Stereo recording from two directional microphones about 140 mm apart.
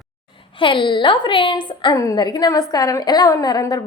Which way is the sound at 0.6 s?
35° left (ahead or behind).